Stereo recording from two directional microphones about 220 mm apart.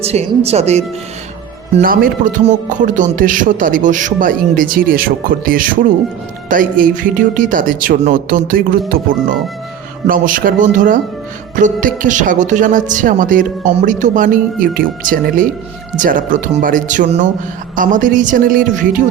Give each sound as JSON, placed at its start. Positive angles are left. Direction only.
{"t": 0.0, "sound": "speech", "side_deg": -30}
{"t": 1.7, "sound": "speech", "side_deg": -40}